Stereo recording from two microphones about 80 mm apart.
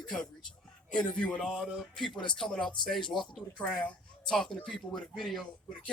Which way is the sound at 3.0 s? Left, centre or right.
Left.